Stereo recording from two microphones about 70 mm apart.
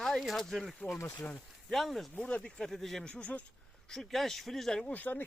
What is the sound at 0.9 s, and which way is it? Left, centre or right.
Speech, left.